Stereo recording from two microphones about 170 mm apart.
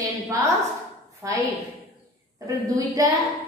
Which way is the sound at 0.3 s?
20° right (ahead or behind).